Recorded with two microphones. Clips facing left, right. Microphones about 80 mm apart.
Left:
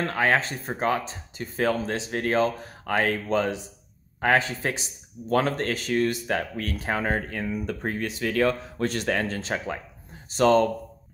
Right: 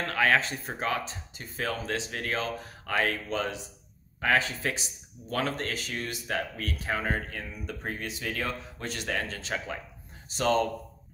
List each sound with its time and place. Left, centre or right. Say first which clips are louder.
0.0 s speech: left 2 dB; left
5.3 s speech: left 7 dB; left